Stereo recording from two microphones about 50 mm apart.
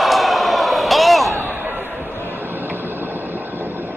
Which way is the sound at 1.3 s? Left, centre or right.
Right.